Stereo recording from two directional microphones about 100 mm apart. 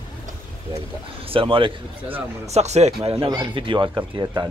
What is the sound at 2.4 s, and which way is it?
Speech, 90° right.